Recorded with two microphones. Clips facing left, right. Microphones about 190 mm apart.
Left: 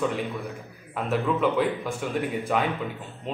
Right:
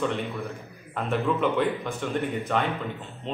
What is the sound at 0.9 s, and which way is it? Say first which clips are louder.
A man's voice: even; 5° left (ahead or behind).